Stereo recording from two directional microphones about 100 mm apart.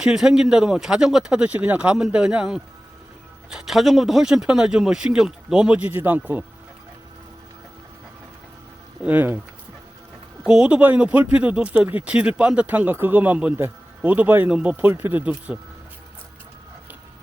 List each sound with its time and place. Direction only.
0.0 s speech: 10° right (ahead or behind)
9.0 s speech: 20° right (ahead or behind)
10.4 s speech: 10° right (ahead or behind)